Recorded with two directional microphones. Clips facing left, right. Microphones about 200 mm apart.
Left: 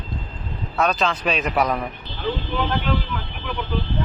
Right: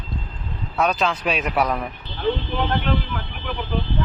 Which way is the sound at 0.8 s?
10° right (ahead or behind).